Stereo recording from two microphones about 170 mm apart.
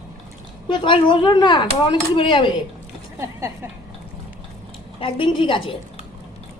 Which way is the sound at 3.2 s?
15° right (ahead or behind).